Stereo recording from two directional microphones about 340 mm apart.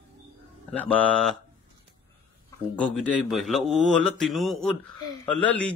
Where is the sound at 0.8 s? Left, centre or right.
Centre.